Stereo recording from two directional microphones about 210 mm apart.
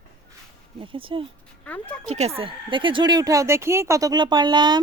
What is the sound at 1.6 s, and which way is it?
Speech, 5° left (ahead or behind).